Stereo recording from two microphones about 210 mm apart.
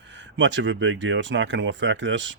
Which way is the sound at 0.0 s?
60° right (ahead or behind).